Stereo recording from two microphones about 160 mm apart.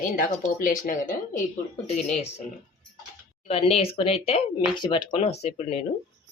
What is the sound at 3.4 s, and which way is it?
Speech, 40° left (ahead or behind).